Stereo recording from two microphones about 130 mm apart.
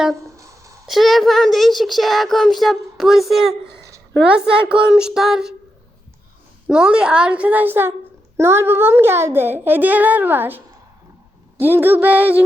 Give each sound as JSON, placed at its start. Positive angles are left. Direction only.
{"t": 0.3, "sound": "a sound", "side_deg": -25}
{"t": 0.9, "sound": "a child's voice", "side_deg": 0}
{"t": 6.7, "sound": "a woman's voice", "side_deg": -5}
{"t": 11.6, "sound": "a woman's voice", "side_deg": -15}